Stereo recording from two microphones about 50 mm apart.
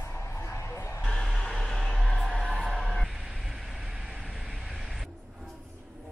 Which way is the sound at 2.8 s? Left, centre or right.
Centre.